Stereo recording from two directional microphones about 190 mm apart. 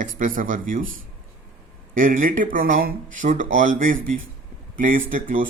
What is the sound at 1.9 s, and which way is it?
Speech, 45° right (ahead or behind).